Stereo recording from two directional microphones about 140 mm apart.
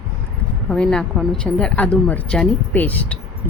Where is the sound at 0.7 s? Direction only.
5° left (ahead or behind).